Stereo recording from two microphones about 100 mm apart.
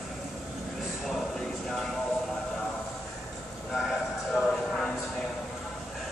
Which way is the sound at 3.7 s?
Centre (ahead or behind).